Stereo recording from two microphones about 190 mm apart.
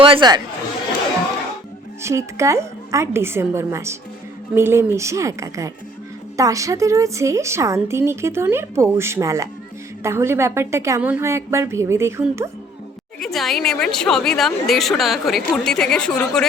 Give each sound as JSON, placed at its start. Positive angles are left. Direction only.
{"t": 0.0, "sound": "speech", "side_deg": -25}
{"t": 2.0, "sound": "a woman's voice", "side_deg": -15}
{"t": 13.1, "sound": "speech", "side_deg": 0}